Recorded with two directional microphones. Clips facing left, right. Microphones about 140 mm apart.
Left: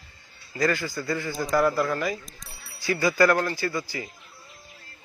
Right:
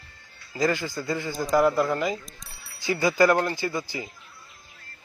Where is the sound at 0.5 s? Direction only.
20° right (ahead or behind).